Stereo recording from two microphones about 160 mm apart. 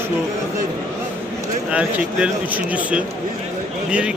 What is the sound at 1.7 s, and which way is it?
Speech, 10° right (ahead or behind).